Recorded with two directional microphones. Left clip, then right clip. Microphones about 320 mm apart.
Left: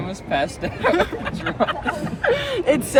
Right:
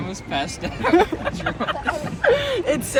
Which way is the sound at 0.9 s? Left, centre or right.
Centre.